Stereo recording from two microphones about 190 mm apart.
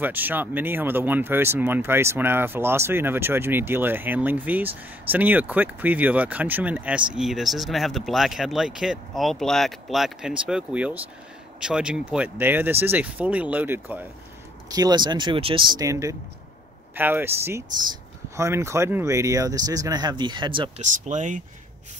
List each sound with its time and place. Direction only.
0.0 s speech: 10° right (ahead or behind)
14.7 s speech: 20° right (ahead or behind)
20.8 s speech: 40° right (ahead or behind)